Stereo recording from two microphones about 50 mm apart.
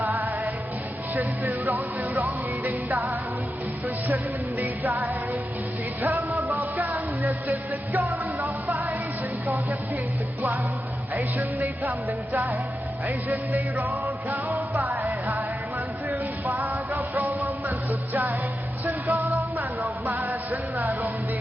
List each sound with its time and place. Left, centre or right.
0.0 s music: right
11.1 s music: right